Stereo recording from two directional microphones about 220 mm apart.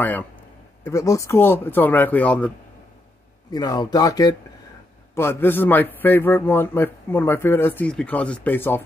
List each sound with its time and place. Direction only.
0.0 s a man's voice: 10° left (ahead or behind)
3.5 s a man's voice: 20° left (ahead or behind)